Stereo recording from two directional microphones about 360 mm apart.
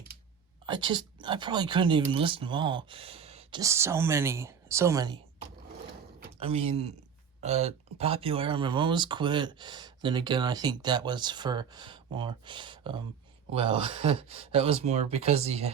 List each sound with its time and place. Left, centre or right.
0.6 s speech: centre